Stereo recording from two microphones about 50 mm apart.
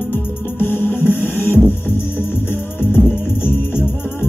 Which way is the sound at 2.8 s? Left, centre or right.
Left.